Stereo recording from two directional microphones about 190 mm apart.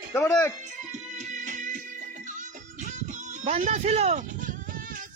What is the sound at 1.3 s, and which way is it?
Music, 40° right (ahead or behind).